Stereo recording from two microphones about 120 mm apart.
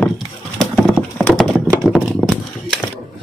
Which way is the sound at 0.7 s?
Centre (ahead or behind).